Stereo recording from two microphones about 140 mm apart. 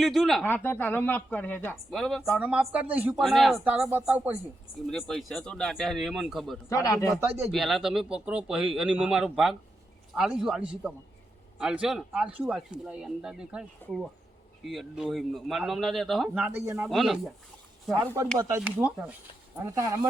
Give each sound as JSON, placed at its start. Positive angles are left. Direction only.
{"t": 0.0, "sound": "speech", "side_deg": 0}
{"t": 0.4, "sound": "a woman's voice", "side_deg": 15}
{"t": 1.9, "sound": "speech", "side_deg": 0}
{"t": 3.2, "sound": "speech", "side_deg": 0}
{"t": 3.6, "sound": "speech", "side_deg": -10}
{"t": 4.9, "sound": "speech", "side_deg": 5}
{"t": 6.7, "sound": "speech", "side_deg": 20}
{"t": 7.2, "sound": "speech", "side_deg": -15}
{"t": 7.5, "sound": "speech", "side_deg": 0}
{"t": 17.9, "sound": "speech", "side_deg": -25}
{"t": 18.6, "sound": "speech", "side_deg": -10}
{"t": 19.6, "sound": "speech", "side_deg": -20}